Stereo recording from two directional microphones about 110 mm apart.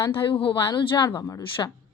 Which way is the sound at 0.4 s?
50° left (ahead or behind).